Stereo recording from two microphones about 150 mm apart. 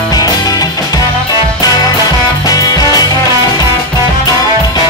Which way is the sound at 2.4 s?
25° left (ahead or behind).